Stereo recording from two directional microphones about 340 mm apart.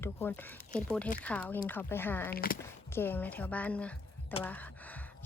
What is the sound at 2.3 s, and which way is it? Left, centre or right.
Speech, left.